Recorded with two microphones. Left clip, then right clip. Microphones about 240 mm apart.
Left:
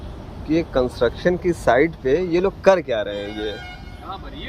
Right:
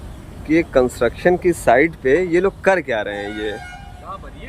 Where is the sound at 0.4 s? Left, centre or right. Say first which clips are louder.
Right 4 dB; centre.